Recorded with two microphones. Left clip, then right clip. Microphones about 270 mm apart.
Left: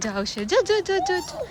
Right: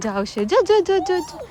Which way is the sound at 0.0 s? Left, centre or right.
Centre.